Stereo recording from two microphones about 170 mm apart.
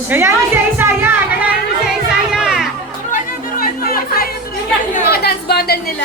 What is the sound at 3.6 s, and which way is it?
Chatter, 60° left (ahead or behind).